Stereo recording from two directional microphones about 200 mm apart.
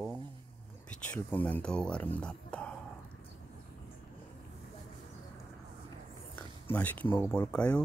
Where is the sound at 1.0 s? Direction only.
5° left (ahead or behind).